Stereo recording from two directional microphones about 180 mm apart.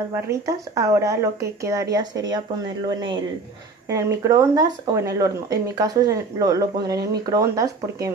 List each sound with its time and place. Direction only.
0.1 s speech: 15° right (ahead or behind)
3.9 s speech: 15° right (ahead or behind)